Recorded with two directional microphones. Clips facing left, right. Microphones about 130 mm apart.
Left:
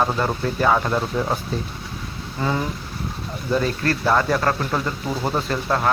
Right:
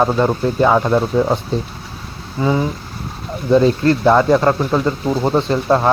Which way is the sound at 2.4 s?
15° right (ahead or behind).